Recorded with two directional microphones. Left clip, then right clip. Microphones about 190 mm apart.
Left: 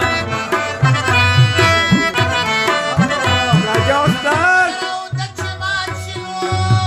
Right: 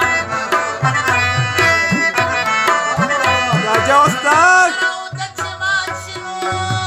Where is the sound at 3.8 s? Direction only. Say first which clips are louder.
Right 6 dB; 65° right (ahead or behind).